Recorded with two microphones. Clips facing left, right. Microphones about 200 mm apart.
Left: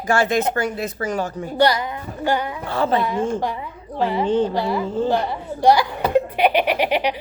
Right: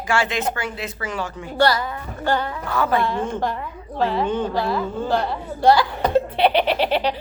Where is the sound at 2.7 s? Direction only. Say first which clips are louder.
Left 1 dB; 25° left (ahead or behind).